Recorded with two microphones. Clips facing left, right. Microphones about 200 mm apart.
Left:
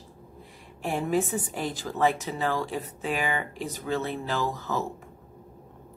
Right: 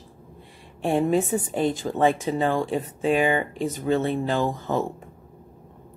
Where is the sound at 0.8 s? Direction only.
25° right (ahead or behind).